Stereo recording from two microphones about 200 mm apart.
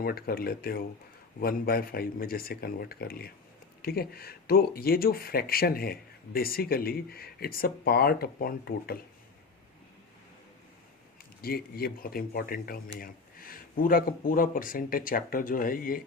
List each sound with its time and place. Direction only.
0.0 s speech: 50° left (ahead or behind)
11.4 s speech: 50° left (ahead or behind)